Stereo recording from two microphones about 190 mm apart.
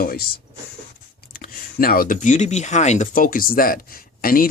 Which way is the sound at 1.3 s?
50° left (ahead or behind).